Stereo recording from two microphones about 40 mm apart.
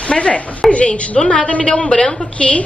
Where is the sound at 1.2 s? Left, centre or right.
Centre.